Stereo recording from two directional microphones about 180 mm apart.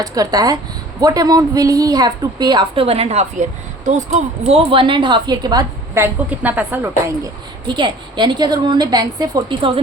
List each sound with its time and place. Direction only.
0.0 s a woman's voice: 20° right (ahead or behind)
7.7 s a woman's voice: 25° right (ahead or behind)